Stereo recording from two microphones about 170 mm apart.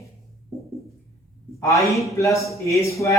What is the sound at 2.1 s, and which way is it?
A man's voice, 15° left (ahead or behind).